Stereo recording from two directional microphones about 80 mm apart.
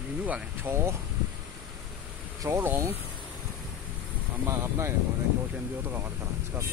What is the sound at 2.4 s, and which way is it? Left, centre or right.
Speech, right.